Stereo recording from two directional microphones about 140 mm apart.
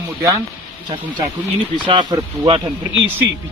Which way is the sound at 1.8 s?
35° right (ahead or behind).